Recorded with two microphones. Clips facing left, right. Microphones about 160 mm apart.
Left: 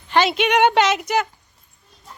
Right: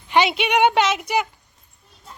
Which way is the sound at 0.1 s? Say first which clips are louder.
Left 1 dB; 10° right (ahead or behind).